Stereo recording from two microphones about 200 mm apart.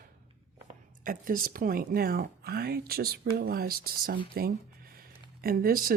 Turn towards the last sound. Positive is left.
turn(degrees=-45)  # may be behind; listen again after turning